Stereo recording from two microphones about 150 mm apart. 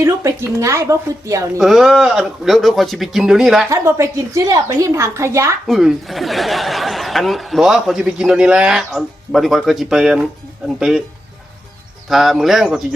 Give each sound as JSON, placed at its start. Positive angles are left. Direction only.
{"t": 0.0, "sound": "a woman's voice", "side_deg": -20}
{"t": 1.5, "sound": "speech", "side_deg": 0}
{"t": 3.7, "sound": "a woman's voice", "side_deg": -20}
{"t": 5.6, "sound": "speech", "side_deg": 0}
{"t": 12.0, "sound": "speech", "side_deg": 0}